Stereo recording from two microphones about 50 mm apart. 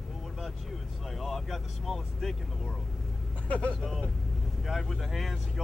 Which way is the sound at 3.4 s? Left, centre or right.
Left.